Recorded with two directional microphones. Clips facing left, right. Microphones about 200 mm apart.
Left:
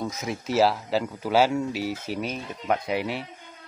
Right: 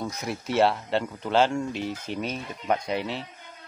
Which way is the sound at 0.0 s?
Centre (ahead or behind).